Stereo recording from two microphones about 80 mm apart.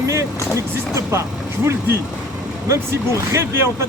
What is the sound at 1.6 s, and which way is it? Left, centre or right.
Speech, right.